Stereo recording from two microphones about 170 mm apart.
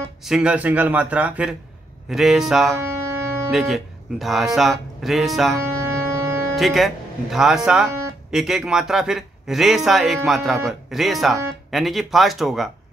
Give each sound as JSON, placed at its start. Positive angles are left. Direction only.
{"t": 0.2, "sound": "a man's voice", "side_deg": -5}
{"t": 2.8, "sound": "music", "side_deg": -15}
{"t": 3.5, "sound": "speech", "side_deg": 0}
{"t": 5.6, "sound": "music", "side_deg": -15}
{"t": 6.5, "sound": "speech", "side_deg": 0}